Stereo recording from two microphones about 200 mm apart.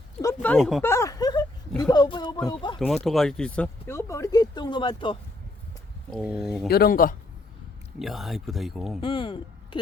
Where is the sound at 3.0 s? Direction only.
Centre (ahead or behind); by 5.2 s 25° left (ahead or behind).